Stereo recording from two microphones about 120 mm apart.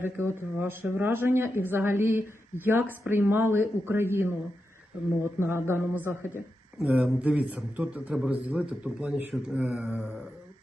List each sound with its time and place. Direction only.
0.0 s a man's voice: 20° right (ahead or behind)